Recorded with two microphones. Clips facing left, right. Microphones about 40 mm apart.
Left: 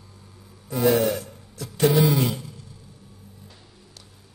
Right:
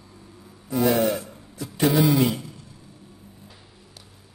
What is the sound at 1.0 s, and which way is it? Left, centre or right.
Speech, centre.